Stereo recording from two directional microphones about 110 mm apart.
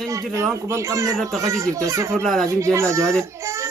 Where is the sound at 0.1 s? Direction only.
25° right (ahead or behind).